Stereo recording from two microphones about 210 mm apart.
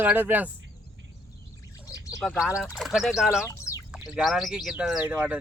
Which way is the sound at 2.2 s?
Centre (ahead or behind).